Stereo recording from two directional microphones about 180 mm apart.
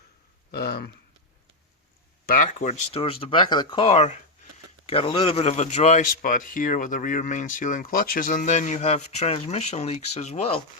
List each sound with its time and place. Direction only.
0.5 s speech: 60° left (ahead or behind)
2.2 s speech: 50° left (ahead or behind)